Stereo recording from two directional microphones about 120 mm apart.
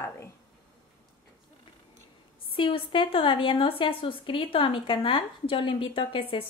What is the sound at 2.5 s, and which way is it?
A woman's voice, 45° left (ahead or behind).